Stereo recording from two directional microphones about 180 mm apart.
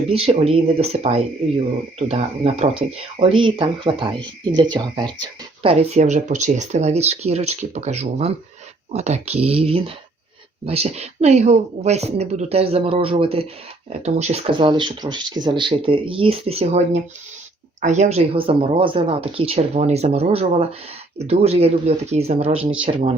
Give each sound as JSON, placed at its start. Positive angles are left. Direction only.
{"t": 0.1, "sound": "speech", "side_deg": -35}
{"t": 5.9, "sound": "speech", "side_deg": -40}